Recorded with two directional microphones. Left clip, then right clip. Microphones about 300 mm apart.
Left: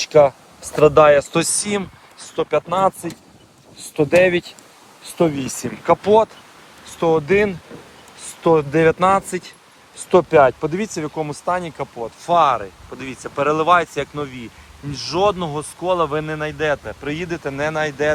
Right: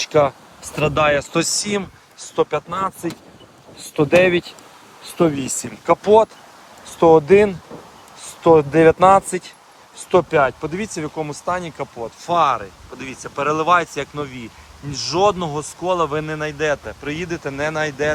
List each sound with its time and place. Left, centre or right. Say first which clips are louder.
0.0 s speech: left 3 dB; centre
2.6 s speech: left 6 dB; centre
3.8 s speech: even; centre